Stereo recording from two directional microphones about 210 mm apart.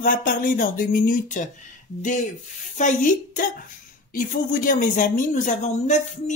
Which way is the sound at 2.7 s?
35° left (ahead or behind).